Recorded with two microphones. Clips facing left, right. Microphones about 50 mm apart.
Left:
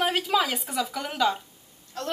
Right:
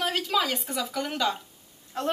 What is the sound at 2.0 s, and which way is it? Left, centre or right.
Speech, right.